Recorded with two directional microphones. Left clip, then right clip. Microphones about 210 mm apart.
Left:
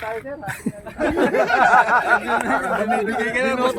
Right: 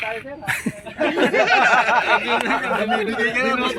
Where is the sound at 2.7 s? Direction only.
5° right (ahead or behind).